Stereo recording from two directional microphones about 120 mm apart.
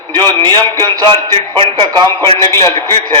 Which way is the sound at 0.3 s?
35° right (ahead or behind).